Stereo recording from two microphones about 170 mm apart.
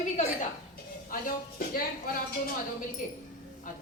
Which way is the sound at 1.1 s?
60° left (ahead or behind).